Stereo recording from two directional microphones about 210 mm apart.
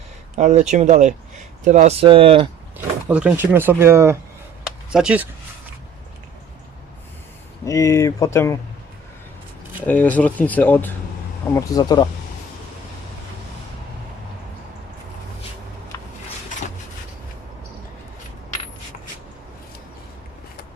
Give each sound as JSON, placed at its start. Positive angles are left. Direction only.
{"t": 0.3, "sound": "speech", "side_deg": -35}
{"t": 2.7, "sound": "speech", "side_deg": -5}
{"t": 7.6, "sound": "speech", "side_deg": 15}
{"t": 9.8, "sound": "speech", "side_deg": 10}
{"t": 15.9, "sound": "a sound", "side_deg": 15}